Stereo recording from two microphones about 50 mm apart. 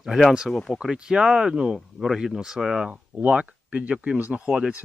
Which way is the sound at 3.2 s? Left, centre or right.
Right.